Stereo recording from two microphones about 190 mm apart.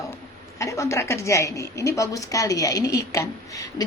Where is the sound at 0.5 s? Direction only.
15° left (ahead or behind).